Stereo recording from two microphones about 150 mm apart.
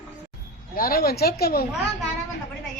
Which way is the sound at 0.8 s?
80° left.